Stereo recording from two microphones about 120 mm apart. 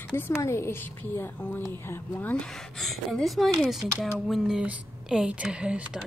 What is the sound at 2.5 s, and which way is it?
Speech, 5° left (ahead or behind).